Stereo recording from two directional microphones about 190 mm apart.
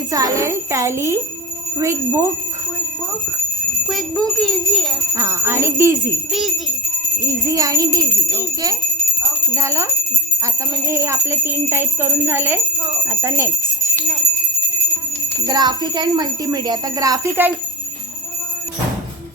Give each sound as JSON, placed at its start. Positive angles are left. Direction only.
{"t": 0.1, "sound": "speech", "side_deg": -15}
{"t": 3.8, "sound": "a child's voice", "side_deg": 0}
{"t": 5.1, "sound": "speech", "side_deg": -15}
{"t": 7.3, "sound": "speech", "side_deg": -15}
{"t": 9.6, "sound": "speech", "side_deg": -15}
{"t": 15.4, "sound": "speech", "side_deg": -20}